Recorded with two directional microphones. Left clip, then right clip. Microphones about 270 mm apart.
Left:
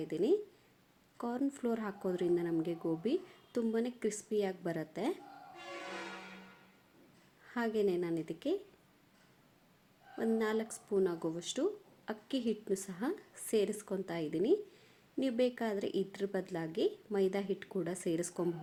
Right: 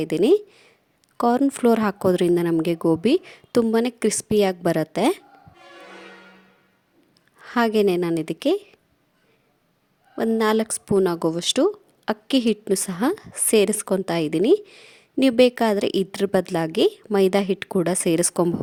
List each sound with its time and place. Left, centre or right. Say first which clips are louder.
0.0 s a woman's voice: right 14 dB; right
7.4 s a woman's voice: right 15 dB; right
10.2 s a woman's voice: right 14 dB; right